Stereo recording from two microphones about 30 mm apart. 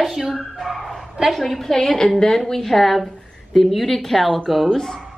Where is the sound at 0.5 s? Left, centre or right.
Centre.